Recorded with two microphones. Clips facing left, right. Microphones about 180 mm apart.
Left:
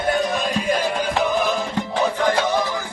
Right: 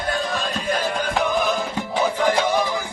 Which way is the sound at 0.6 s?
10° left (ahead or behind).